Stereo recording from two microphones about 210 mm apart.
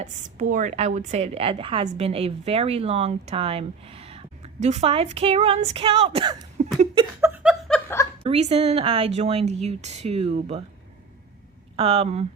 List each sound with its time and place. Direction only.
0.0 s a woman's voice: 35° right (ahead or behind)
6.9 s laughter: 20° right (ahead or behind)
7.3 s chuckle: 10° right (ahead or behind)
7.7 s snicker: 10° left (ahead or behind)
8.2 s a woman's voice: 25° right (ahead or behind)
11.8 s a woman's voice: 30° right (ahead or behind)